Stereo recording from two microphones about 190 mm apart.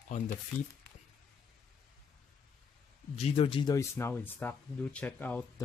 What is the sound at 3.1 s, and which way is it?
Speech, 30° left (ahead or behind).